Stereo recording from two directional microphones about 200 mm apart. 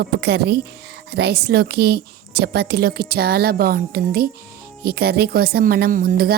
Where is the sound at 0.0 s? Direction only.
55° right (ahead or behind).